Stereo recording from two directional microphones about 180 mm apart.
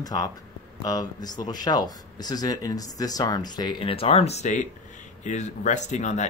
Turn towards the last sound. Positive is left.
turn(degrees=40)  # may be behind; listen again after turning